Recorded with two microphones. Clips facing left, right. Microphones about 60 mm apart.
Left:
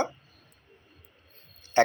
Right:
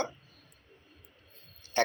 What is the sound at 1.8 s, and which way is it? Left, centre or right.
Speech, left.